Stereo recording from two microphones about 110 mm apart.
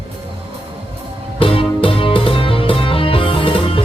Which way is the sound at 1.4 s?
55° left (ahead or behind).